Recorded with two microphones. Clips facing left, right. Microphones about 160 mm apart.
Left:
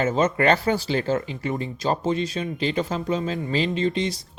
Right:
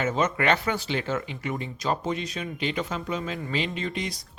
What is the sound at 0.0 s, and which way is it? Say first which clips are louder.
Speech: left 4 dB; 30° left (ahead or behind).